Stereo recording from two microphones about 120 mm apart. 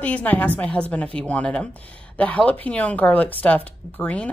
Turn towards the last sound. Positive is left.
turn(degrees=10)  # may be behind; listen again after turning